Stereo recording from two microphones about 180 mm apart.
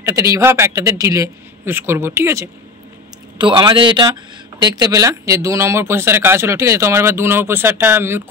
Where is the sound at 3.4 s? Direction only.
25° right (ahead or behind).